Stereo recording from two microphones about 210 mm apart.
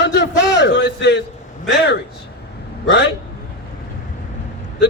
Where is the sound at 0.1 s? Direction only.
55° left (ahead or behind).